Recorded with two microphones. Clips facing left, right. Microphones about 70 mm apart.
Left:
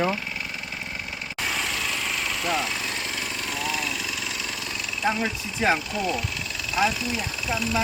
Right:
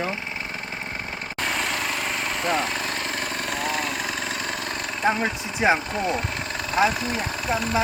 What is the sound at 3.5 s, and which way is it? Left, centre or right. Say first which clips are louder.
Vehicle: right 2 dB; right.